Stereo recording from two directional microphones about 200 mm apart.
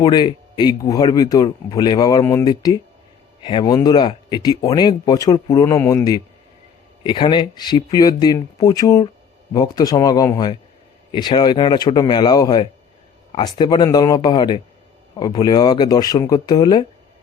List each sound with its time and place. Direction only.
0.0 s speech: 20° left (ahead or behind)